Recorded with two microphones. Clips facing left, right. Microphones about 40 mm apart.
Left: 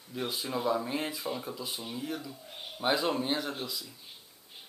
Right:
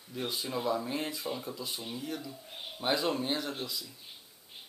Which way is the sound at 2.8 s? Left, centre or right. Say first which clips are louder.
Left 2 dB; centre.